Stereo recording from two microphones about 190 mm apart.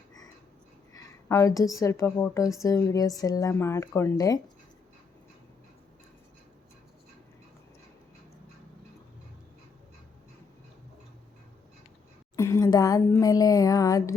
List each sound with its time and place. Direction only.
0.9 s a woman's voice: 15° left (ahead or behind)
12.4 s speech: 15° left (ahead or behind)